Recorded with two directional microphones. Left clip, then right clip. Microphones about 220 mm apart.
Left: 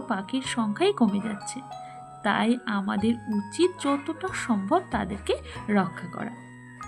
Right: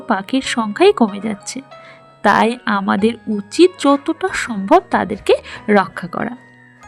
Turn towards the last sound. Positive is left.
turn(degrees=-50)  # may be behind; listen again after turning